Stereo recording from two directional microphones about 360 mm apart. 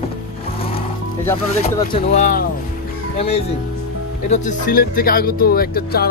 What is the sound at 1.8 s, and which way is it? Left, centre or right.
Speech, centre.